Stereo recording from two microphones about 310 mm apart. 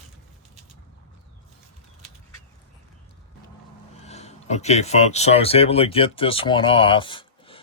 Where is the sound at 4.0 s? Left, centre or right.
Left.